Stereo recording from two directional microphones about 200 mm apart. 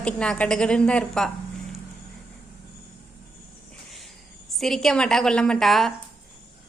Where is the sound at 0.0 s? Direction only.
5° left (ahead or behind).